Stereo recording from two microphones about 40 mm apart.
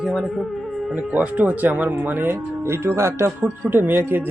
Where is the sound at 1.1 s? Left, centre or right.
Right.